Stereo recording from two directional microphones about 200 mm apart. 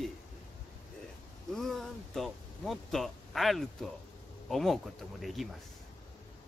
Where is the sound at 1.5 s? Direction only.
Centre (ahead or behind).